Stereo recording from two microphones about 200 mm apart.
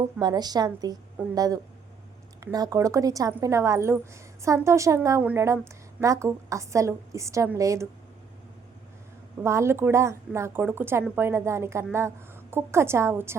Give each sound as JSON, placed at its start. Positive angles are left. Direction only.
{"t": 0.2, "sound": "a woman's voice", "side_deg": -20}
{"t": 2.4, "sound": "a woman's voice", "side_deg": -15}
{"t": 9.4, "sound": "a woman's voice", "side_deg": -15}